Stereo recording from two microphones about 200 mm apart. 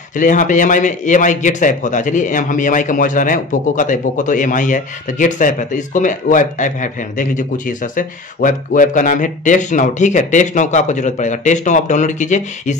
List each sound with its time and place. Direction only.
0.1 s a man's voice: 40° left (ahead or behind)